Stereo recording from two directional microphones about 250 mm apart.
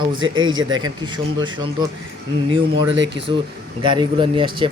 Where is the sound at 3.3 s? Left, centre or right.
Centre.